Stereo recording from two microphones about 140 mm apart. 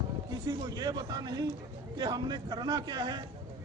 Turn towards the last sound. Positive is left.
turn(degrees=-30)  # may be behind; listen again after turning